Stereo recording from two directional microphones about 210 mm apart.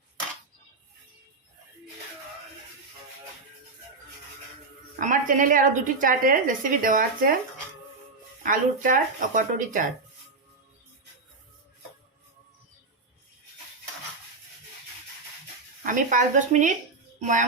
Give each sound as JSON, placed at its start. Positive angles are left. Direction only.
{"t": 4.9, "sound": "a woman's voice", "side_deg": -40}
{"t": 8.4, "sound": "a woman's voice", "side_deg": -40}
{"t": 15.8, "sound": "a woman's voice", "side_deg": -40}